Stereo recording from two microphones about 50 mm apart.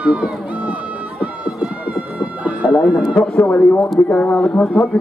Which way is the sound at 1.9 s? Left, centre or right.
Right.